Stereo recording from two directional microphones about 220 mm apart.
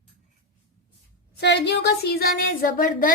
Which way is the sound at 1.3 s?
50° left (ahead or behind).